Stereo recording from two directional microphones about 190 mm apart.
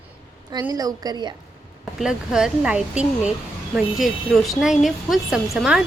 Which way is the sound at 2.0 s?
5° right (ahead or behind).